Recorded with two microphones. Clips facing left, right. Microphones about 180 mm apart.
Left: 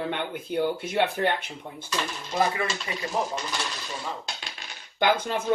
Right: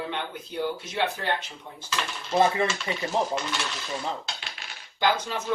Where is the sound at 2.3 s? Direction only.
25° right (ahead or behind).